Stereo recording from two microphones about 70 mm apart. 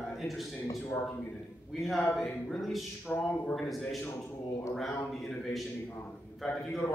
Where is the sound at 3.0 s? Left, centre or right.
Left.